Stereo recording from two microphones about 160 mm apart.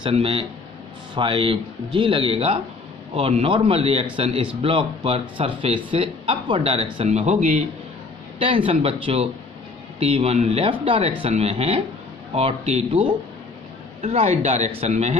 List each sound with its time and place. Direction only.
0.0 s speech: 35° right (ahead or behind)
8.4 s speech: 35° right (ahead or behind)
14.0 s speech: 45° right (ahead or behind)